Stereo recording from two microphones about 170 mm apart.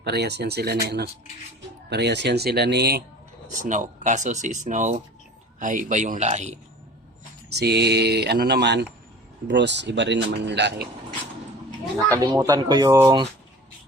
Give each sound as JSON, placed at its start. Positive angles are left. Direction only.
{"t": 0.0, "sound": "speech", "side_deg": -75}
{"t": 3.6, "sound": "speech", "side_deg": -50}
{"t": 7.5, "sound": "speech", "side_deg": -75}
{"t": 9.5, "sound": "speech", "side_deg": -90}
{"t": 11.9, "sound": "speech", "side_deg": -20}